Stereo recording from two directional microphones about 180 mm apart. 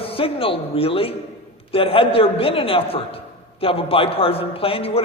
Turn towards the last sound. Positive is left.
turn(degrees=30)  # may be behind; listen again after turning